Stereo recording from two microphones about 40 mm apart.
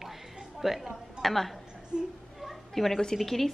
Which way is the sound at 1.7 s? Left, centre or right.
Centre.